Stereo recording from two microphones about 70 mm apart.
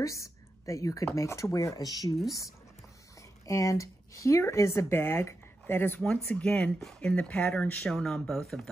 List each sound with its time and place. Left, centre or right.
0.0 s a sound: left
1.0 s speech: left
3.2 s speech: left
5.9 s speech: centre
7.9 s speech: centre